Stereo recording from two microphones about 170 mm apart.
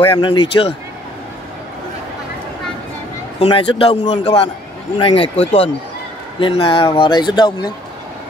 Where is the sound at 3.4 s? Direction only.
30° left (ahead or behind).